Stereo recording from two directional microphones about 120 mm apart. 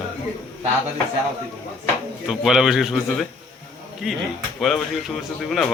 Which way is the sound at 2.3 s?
5° right (ahead or behind).